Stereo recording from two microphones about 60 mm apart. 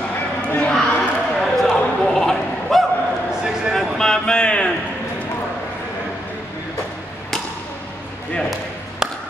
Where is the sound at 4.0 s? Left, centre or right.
Centre.